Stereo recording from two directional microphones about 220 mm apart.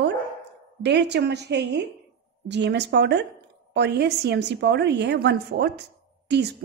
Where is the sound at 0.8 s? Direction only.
50° right (ahead or behind).